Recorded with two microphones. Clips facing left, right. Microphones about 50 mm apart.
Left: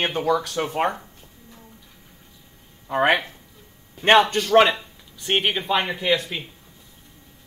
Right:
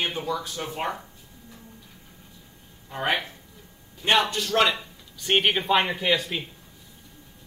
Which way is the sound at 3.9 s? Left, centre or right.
Left.